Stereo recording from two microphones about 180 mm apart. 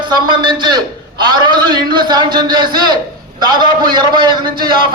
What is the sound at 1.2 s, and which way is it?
A man's voice, 25° right (ahead or behind).